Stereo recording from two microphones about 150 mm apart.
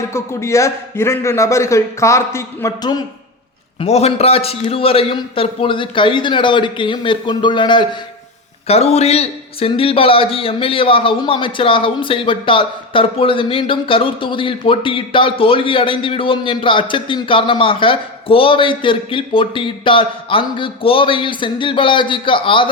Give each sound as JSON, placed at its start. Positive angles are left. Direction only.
{"t": 0.1, "sound": "a man's voice", "side_deg": 20}
{"t": 3.8, "sound": "a man's voice", "side_deg": 45}
{"t": 8.6, "sound": "a man's voice", "side_deg": 45}